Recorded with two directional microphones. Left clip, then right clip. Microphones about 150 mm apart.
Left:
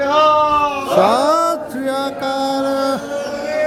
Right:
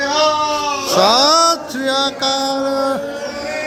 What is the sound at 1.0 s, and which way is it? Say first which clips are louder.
Mantra: right 2 dB; centre (ahead or behind).